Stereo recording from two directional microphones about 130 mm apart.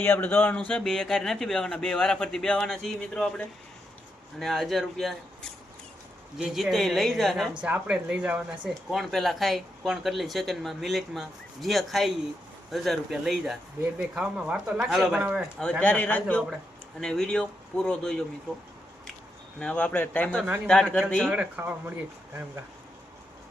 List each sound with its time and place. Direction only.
0.0 s speech: 15° left (ahead or behind)
0.7 s speech: 5° left (ahead or behind)
15.8 s speech: 10° left (ahead or behind)
19.5 s speech: 10° left (ahead or behind)
21.2 s speech: 10° right (ahead or behind)